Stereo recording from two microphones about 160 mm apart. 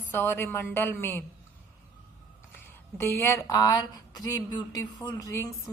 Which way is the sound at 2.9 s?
15° left (ahead or behind).